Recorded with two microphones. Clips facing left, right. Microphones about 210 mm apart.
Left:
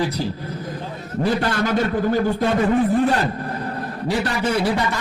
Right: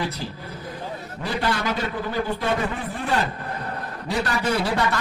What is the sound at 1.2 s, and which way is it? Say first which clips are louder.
A man's voice: left 5 dB; 45° left (ahead or behind).